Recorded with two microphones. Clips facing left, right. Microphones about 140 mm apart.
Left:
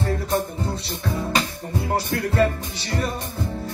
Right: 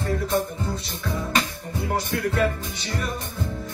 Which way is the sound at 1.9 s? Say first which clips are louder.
Left 3 dB; 35° left (ahead or behind).